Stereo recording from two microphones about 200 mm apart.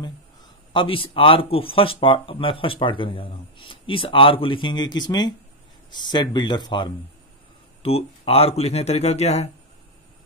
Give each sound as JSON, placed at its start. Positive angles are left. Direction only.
{"t": 0.7, "sound": "speech", "side_deg": 25}